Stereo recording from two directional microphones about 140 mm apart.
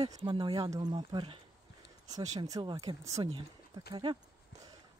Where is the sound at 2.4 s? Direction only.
30° right (ahead or behind).